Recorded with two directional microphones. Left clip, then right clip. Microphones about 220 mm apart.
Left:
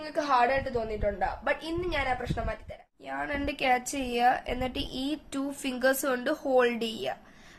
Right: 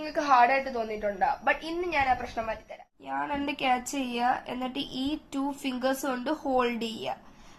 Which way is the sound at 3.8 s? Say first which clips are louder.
Even; 60° left (ahead or behind).